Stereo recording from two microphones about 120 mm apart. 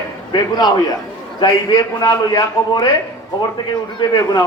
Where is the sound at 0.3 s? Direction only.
35° left (ahead or behind).